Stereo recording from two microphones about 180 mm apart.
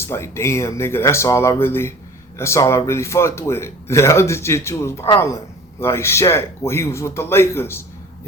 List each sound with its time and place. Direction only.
0.0 s speech: 15° left (ahead or behind)